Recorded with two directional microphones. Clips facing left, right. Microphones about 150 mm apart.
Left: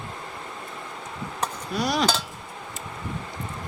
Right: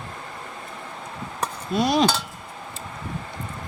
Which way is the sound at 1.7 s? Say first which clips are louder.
Right 5 dB; 25° right (ahead or behind).